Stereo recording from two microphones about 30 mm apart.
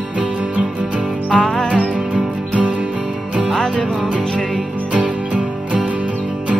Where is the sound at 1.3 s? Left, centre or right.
Left.